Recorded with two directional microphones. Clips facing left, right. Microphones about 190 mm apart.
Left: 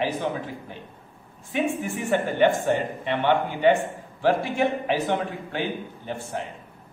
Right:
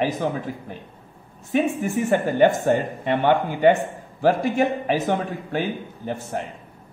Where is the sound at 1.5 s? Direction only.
45° right (ahead or behind).